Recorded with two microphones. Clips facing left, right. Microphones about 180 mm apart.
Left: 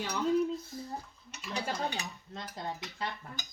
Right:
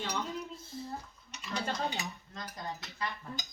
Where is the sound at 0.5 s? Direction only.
25° right (ahead or behind).